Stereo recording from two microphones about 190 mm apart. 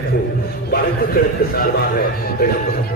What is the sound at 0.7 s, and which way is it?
Speech, 55° left (ahead or behind).